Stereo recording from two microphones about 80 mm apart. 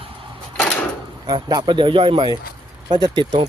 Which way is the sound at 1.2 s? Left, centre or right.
Right.